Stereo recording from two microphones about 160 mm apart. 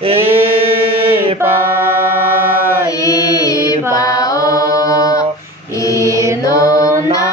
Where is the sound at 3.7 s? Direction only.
20° left (ahead or behind).